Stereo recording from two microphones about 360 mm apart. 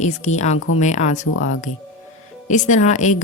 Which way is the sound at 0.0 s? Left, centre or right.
Centre.